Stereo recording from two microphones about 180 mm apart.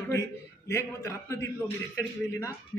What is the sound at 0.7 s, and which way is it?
A man's voice, 15° left (ahead or behind).